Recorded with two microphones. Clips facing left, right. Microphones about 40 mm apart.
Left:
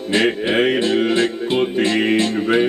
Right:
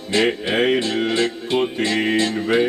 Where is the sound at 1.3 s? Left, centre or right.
Centre.